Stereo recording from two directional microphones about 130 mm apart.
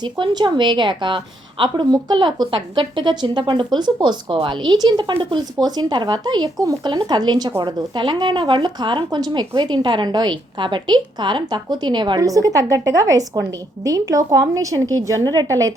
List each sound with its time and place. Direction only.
0.0 s a woman's voice: 35° right (ahead or behind)